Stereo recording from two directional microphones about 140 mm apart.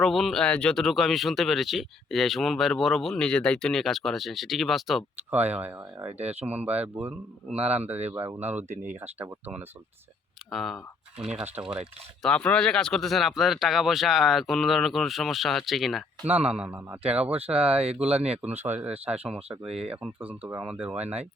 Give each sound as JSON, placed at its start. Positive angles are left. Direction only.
{"t": 0.0, "sound": "speech", "side_deg": 0}
{"t": 5.3, "sound": "speech", "side_deg": -10}
{"t": 10.5, "sound": "speech", "side_deg": 0}
{"t": 11.3, "sound": "speech", "side_deg": -10}
{"t": 12.2, "sound": "speech", "side_deg": 10}
{"t": 19.6, "sound": "speech", "side_deg": -45}
{"t": 19.9, "sound": "speech", "side_deg": -10}